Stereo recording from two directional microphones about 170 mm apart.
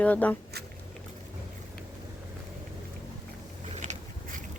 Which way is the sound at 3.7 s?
45° right (ahead or behind).